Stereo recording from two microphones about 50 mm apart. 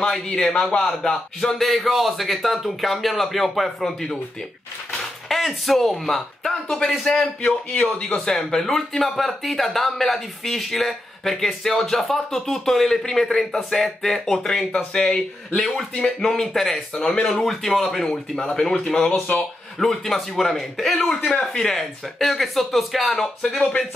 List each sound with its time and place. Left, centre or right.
0.0 s speech: centre
5.3 s speech: centre
7.7 s speech: left
8.3 s speech: centre
15.6 s speech: centre
17.3 s speech: centre
19.3 s speech: left
19.8 s speech: centre
21.3 s speech: centre